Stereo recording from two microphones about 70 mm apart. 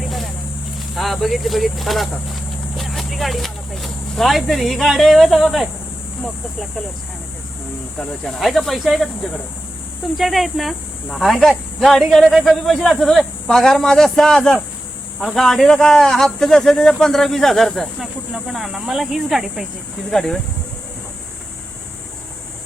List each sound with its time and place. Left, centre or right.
0.9 s speech: centre
8.2 s speech: centre
10.2 s a man's voice: centre
20.1 s speech: centre